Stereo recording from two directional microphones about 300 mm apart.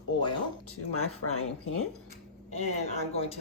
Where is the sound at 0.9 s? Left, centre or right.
Left.